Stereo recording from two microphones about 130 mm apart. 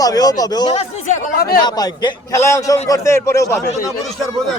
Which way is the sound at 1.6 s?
30° left (ahead or behind).